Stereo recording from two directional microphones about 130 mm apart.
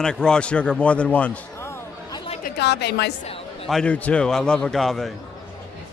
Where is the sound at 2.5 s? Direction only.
90° left.